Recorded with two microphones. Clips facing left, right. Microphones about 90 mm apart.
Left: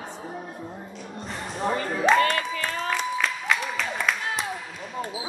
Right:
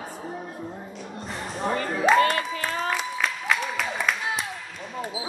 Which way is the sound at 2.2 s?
35° right (ahead or behind).